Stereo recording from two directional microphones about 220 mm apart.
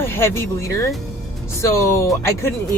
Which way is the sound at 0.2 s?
10° left (ahead or behind).